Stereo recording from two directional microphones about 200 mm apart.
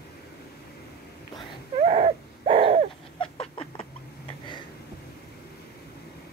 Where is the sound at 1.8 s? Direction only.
35° right (ahead or behind).